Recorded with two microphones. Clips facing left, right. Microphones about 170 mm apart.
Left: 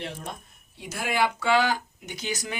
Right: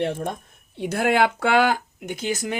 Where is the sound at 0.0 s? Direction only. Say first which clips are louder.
Right 10 dB; 55° right (ahead or behind).